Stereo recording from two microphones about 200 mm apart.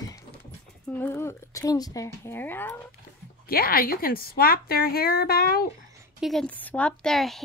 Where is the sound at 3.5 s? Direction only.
50° left (ahead or behind).